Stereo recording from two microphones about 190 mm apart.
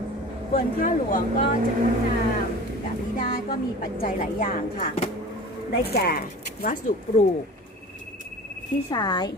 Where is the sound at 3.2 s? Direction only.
50° left (ahead or behind).